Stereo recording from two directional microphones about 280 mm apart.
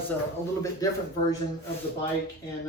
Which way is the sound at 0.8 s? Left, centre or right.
Centre.